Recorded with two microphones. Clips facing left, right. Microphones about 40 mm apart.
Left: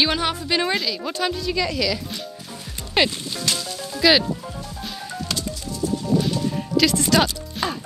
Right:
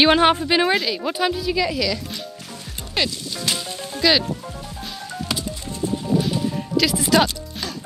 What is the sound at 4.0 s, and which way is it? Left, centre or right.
Speech, centre.